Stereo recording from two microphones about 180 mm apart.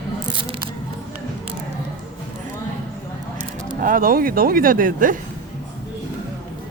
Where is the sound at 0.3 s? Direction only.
25° right (ahead or behind).